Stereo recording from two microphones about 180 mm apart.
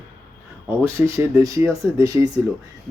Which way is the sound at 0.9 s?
15° right (ahead or behind).